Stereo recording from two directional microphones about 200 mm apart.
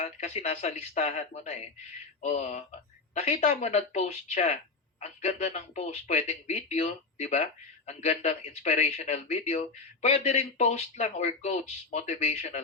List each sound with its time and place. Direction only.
0.0 s speech: 35° left (ahead or behind)